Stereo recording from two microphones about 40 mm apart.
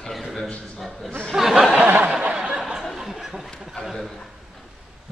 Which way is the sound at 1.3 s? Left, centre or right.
Centre.